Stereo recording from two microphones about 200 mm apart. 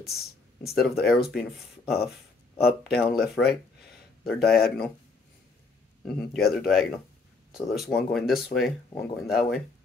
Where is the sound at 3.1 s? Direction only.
Centre (ahead or behind).